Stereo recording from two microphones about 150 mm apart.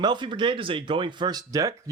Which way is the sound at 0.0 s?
30° right (ahead or behind).